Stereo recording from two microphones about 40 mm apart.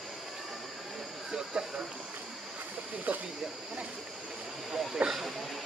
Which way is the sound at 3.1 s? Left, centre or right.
Right.